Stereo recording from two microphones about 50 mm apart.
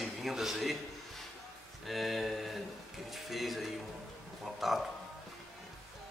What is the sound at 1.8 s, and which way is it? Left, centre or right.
A man's voice, centre.